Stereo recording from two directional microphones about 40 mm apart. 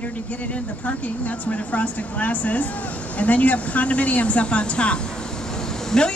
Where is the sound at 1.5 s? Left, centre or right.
Left.